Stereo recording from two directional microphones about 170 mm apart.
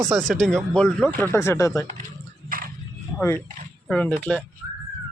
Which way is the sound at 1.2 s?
15° left (ahead or behind).